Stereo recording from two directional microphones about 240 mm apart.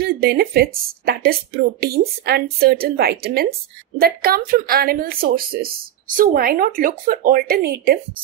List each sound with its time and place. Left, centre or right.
0.0 s speech: right